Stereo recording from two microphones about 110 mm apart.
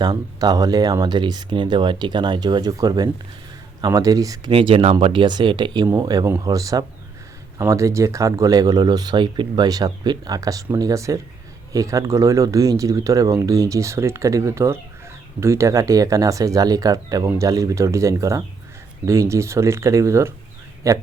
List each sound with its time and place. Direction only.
0.0 s speech: 35° right (ahead or behind)
4.5 s speech: 55° right (ahead or behind); by 21.0 s 30° right (ahead or behind)